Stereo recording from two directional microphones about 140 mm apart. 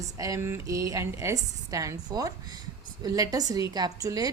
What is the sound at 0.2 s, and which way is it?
A woman's voice, 20° right (ahead or behind).